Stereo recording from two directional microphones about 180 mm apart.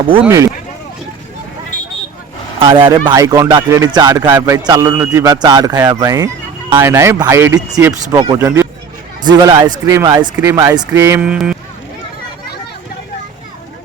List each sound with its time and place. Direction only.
0.3 s speech: 15° right (ahead or behind)
2.6 s speech: 30° right (ahead or behind); by 11.5 s 5° right (ahead or behind)